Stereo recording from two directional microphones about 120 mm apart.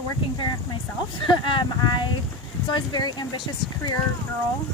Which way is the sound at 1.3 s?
45° left (ahead or behind).